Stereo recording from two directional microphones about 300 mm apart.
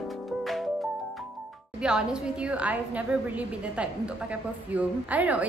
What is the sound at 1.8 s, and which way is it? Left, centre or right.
A woman's voice, centre.